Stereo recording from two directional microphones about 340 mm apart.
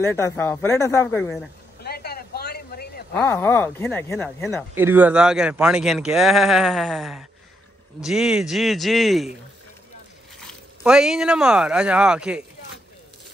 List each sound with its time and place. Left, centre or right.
0.0 s speech: centre
1.8 s a sound: left
3.1 s speech: centre
4.7 s speech: centre
10.4 s speech: centre